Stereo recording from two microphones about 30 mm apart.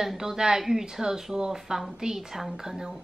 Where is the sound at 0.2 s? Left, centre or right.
Centre.